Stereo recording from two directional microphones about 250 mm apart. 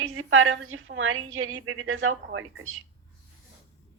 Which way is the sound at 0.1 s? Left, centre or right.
Right.